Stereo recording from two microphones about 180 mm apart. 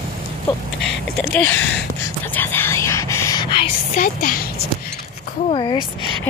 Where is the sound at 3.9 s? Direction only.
50° left (ahead or behind).